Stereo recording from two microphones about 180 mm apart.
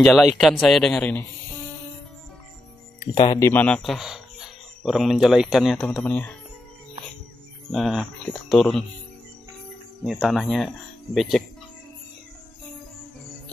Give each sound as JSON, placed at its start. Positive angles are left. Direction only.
{"t": 0.0, "sound": "speech", "side_deg": 0}
{"t": 3.2, "sound": "speech", "side_deg": 20}
{"t": 7.7, "sound": "speech", "side_deg": 0}
{"t": 10.0, "sound": "speech", "side_deg": 0}